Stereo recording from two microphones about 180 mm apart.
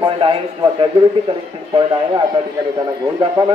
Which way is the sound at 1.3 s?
30° right (ahead or behind).